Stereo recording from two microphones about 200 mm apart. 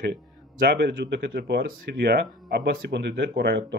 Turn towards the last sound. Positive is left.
turn(degrees=-55)  # may be behind; listen again after turning